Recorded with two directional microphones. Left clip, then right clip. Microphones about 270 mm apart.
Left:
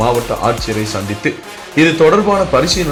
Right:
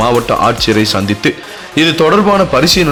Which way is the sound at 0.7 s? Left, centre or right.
Right.